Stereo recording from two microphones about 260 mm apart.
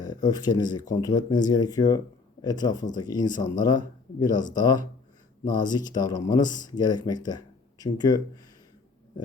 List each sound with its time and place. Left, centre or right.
0.0 s speech: centre